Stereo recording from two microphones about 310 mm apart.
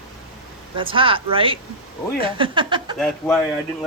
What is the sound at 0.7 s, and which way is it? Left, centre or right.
A woman's voice, centre.